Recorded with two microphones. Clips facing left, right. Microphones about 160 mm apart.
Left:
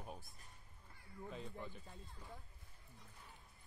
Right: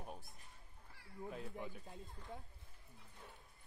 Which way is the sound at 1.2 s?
10° right (ahead or behind).